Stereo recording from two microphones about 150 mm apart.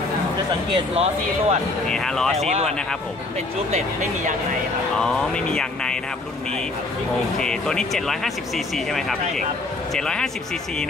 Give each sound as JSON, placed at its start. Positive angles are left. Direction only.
{"t": 0.9, "sound": "speech", "side_deg": -45}
{"t": 1.9, "sound": "speech", "side_deg": 5}
{"t": 2.4, "sound": "speech", "side_deg": -50}
{"t": 4.9, "sound": "speech", "side_deg": 5}
{"t": 7.3, "sound": "speech", "side_deg": 5}